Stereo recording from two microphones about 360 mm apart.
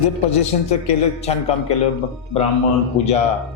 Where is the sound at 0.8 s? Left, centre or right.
Centre.